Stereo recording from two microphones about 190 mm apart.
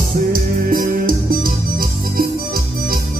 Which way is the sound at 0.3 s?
50° right (ahead or behind).